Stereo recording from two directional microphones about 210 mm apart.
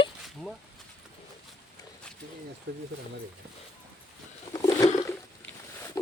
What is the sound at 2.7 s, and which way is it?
Speech, 55° right (ahead or behind).